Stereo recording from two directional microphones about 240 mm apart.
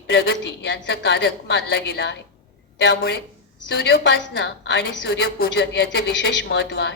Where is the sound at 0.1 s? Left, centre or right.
Left.